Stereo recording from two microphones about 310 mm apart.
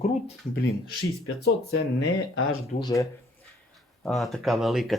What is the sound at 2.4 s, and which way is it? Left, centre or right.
Speech, left.